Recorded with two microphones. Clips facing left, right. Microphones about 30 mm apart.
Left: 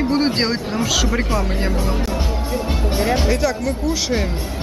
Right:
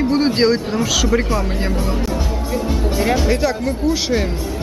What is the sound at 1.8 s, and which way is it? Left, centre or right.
Music, centre.